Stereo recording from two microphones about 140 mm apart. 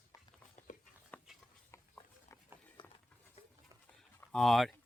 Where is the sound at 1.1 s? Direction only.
10° left (ahead or behind).